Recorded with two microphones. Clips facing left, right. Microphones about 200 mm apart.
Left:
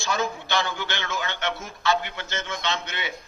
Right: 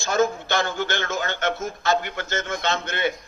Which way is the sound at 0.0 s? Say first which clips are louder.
Right 6 dB; 45° right (ahead or behind).